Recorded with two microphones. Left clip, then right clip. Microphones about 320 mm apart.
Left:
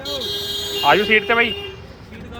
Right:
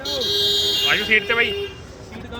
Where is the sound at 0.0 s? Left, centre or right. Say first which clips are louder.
Right 4 dB; right.